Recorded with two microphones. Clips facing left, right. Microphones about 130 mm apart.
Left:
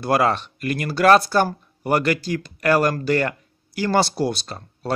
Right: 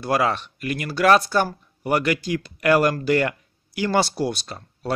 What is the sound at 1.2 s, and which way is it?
Speech, 35° left (ahead or behind).